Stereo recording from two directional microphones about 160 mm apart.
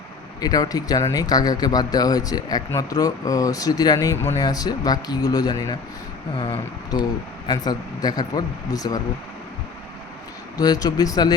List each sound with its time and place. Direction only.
0.4 s speech: 25° left (ahead or behind)
10.6 s speech: 25° left (ahead or behind)